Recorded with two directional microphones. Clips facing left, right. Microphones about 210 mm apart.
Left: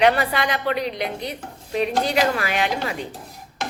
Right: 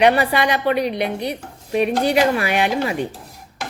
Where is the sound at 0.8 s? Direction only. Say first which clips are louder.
Right 5 dB; 65° right (ahead or behind).